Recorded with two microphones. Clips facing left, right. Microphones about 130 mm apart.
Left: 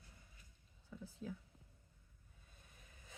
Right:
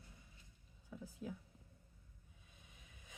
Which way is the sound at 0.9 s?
10° right (ahead or behind).